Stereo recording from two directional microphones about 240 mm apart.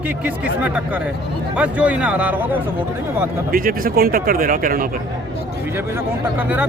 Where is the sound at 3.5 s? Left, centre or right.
Right.